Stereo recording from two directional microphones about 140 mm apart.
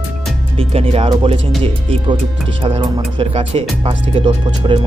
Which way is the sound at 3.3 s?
45° right (ahead or behind).